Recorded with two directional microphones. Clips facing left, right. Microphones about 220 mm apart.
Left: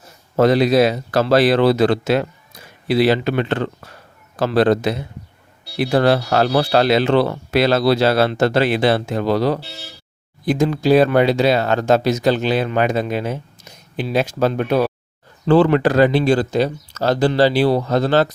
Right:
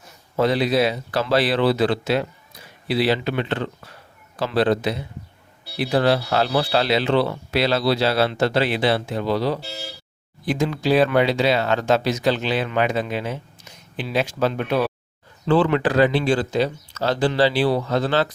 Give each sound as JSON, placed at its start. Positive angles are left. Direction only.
{"t": 0.3, "sound": "speech", "side_deg": 45}